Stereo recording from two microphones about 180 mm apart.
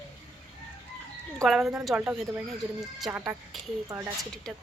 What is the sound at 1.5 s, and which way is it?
Speech, centre (ahead or behind).